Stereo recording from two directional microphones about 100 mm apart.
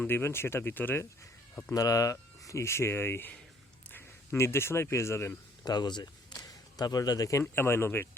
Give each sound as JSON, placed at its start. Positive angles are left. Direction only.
{"t": 0.0, "sound": "speech", "side_deg": 25}
{"t": 1.7, "sound": "speech", "side_deg": 35}
{"t": 5.6, "sound": "speech", "side_deg": 45}